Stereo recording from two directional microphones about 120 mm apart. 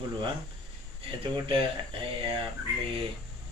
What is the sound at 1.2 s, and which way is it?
Speech, 50° right (ahead or behind).